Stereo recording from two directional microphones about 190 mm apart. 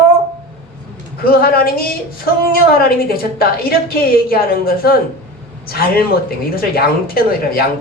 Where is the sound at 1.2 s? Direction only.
50° left (ahead or behind).